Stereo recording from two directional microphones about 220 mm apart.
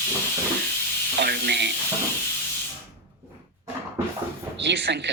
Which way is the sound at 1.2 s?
45° right (ahead or behind).